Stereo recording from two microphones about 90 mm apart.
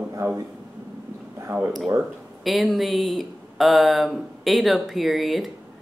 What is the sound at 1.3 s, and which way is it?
Speech, 25° right (ahead or behind).